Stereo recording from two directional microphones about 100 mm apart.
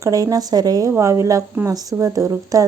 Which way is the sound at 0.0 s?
35° right (ahead or behind).